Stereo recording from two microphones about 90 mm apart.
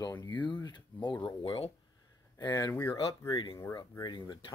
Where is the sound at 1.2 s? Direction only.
80° left.